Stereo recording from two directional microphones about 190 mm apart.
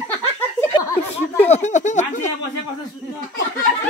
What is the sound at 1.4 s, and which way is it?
Speech, 35° left (ahead or behind).